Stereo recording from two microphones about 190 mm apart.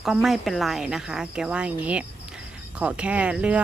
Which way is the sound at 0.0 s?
Centre (ahead or behind).